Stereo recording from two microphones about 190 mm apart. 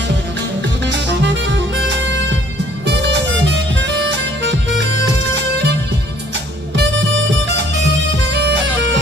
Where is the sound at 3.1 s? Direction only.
70° right (ahead or behind).